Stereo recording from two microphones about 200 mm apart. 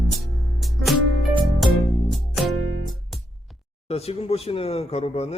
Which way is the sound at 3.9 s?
30° left (ahead or behind).